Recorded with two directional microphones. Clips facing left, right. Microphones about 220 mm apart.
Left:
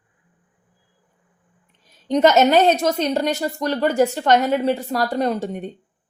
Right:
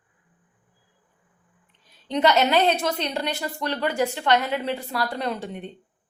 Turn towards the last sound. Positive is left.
turn(degrees=45)  # may be behind; listen again after turning